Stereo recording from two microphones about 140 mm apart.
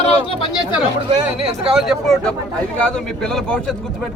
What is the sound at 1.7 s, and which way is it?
Speech, centre (ahead or behind).